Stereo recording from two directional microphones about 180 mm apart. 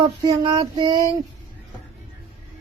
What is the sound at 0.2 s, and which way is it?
Child singing, 20° right (ahead or behind).